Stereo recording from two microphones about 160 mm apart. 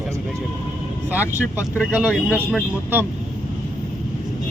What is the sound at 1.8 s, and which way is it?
Speech, 10° right (ahead or behind).